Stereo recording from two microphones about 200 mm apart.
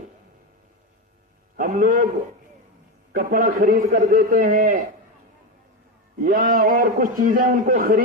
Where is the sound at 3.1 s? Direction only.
45° right (ahead or behind).